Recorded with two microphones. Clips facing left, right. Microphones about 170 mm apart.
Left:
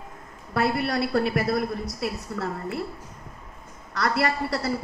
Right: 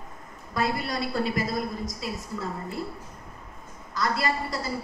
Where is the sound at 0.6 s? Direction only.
65° left (ahead or behind).